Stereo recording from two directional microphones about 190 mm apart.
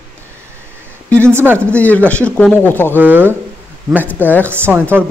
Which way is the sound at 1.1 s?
15° right (ahead or behind).